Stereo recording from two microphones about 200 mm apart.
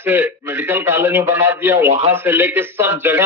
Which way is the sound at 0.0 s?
10° right (ahead or behind).